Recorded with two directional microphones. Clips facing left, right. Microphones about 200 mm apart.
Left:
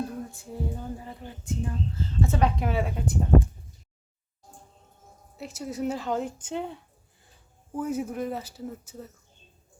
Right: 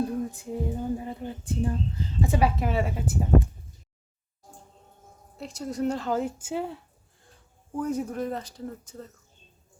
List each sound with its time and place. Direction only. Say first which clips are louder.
0.3 s speech: right 4 dB; 20° right (ahead or behind)
1.9 s speech: even; 15° right (ahead or behind)
2.6 s speech: right 1 dB; centre (ahead or behind)
5.4 s speech: right 2 dB; 5° left (ahead or behind)